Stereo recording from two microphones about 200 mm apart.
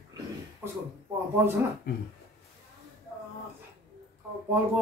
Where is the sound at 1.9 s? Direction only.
55° left (ahead or behind).